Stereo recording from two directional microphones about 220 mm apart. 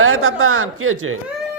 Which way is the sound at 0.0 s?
70° right (ahead or behind).